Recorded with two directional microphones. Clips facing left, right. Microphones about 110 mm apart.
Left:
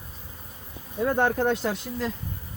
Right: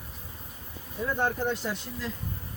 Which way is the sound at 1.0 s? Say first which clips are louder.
Left 6 dB; 65° left (ahead or behind).